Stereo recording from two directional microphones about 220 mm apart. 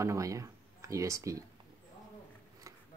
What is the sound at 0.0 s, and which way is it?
Speech, 15° right (ahead or behind).